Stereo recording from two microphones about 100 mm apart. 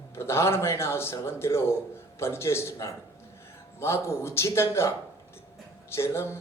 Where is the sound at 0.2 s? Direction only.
25° left (ahead or behind).